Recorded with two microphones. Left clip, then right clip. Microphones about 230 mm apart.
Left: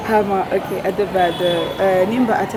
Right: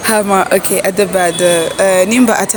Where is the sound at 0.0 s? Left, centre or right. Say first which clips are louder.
Right 5 dB; right.